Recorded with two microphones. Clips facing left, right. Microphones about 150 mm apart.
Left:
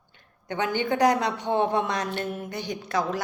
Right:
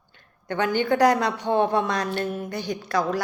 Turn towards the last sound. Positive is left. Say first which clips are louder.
# right 3 dB
turn(degrees=20)  # may be behind; listen again after turning